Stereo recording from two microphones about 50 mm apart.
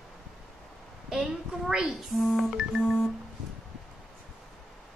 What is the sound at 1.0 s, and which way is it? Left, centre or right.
Speech, centre.